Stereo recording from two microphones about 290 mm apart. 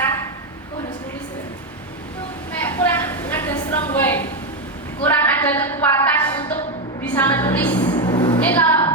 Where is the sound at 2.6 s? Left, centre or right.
Centre.